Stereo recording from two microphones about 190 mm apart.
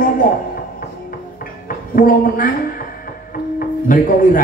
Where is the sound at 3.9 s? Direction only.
45° left (ahead or behind).